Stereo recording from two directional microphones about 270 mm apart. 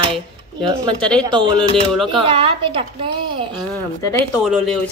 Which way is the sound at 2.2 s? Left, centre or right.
Centre.